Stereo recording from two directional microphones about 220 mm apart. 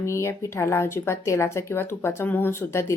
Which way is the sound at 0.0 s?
10° left (ahead or behind).